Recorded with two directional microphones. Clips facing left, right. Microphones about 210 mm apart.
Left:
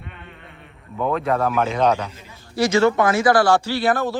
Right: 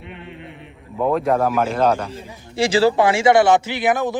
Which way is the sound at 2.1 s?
30° right (ahead or behind).